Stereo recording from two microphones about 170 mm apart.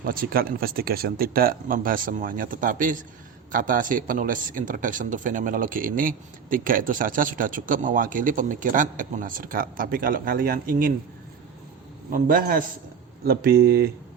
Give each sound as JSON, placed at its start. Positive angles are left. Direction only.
{"t": 0.0, "sound": "a man's voice", "side_deg": -55}
{"t": 12.1, "sound": "speech", "side_deg": -55}